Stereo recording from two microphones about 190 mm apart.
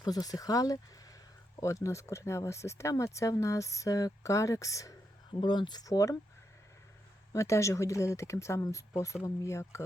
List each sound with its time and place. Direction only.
0.0 s speech: 20° left (ahead or behind)
7.3 s speech: 15° left (ahead or behind)